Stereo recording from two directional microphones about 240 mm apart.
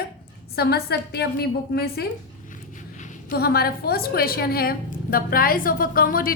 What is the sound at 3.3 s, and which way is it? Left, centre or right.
A woman's voice, left.